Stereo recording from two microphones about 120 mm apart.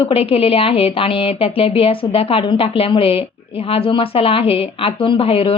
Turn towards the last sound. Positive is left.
turn(degrees=50)  # may be behind; listen again after turning